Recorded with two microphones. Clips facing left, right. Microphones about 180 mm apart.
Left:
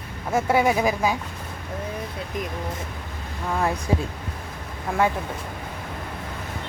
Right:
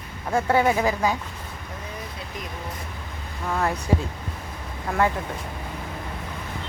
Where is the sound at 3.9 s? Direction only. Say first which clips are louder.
Right 2 dB; 15° left (ahead or behind).